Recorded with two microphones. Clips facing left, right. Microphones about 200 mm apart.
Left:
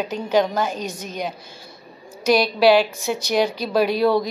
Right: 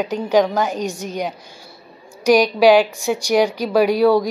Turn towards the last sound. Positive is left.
turn(degrees=-10)  # may be behind; listen again after turning